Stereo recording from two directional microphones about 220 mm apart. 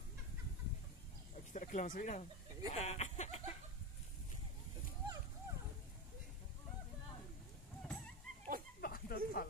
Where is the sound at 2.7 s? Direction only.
30° left (ahead or behind).